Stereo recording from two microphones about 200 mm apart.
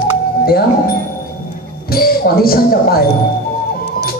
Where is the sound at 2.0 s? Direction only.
50° left (ahead or behind).